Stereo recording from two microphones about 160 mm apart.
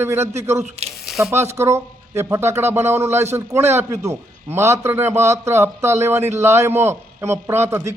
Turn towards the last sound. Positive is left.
turn(degrees=-15)  # may be behind; listen again after turning